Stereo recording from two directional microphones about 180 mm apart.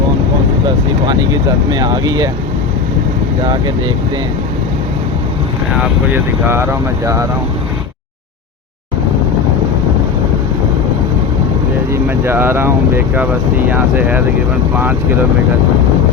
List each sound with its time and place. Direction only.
1.0 s speech: 25° right (ahead or behind)
3.4 s speech: 25° right (ahead or behind)
5.8 s speech: 10° right (ahead or behind)
12.0 s speech: 15° right (ahead or behind)